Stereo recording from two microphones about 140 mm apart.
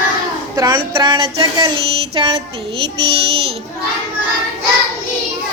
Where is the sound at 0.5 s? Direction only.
30° right (ahead or behind).